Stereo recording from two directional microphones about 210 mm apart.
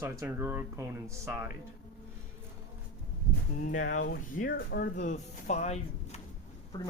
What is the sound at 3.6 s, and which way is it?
Speech, 40° left (ahead or behind).